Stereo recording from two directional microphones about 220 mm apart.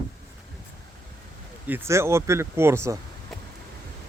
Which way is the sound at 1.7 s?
10° right (ahead or behind).